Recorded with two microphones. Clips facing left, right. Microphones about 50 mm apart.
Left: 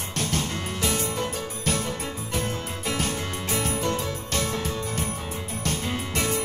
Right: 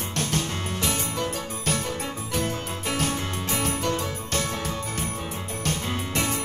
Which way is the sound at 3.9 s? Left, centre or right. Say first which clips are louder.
Even; right.